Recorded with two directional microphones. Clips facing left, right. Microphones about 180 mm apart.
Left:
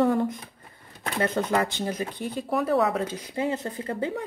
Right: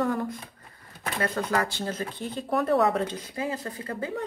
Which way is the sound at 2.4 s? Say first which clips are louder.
Right 1 dB; centre (ahead or behind).